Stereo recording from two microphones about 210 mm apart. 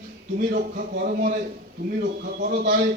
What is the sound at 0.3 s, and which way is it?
A man's voice, 40° right (ahead or behind).